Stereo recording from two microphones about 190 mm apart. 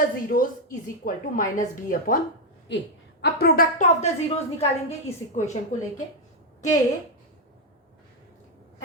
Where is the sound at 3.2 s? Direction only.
55° left (ahead or behind).